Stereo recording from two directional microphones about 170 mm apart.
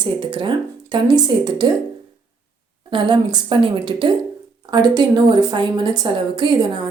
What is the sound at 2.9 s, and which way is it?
A woman's voice, 25° right (ahead or behind).